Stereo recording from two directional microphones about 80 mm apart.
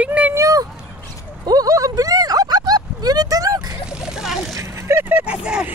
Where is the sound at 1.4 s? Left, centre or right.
Right.